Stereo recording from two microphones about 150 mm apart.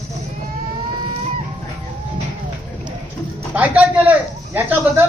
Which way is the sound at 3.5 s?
10° right (ahead or behind).